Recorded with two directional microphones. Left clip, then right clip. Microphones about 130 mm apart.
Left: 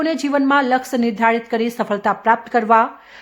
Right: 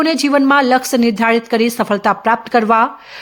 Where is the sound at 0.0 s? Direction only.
25° right (ahead or behind).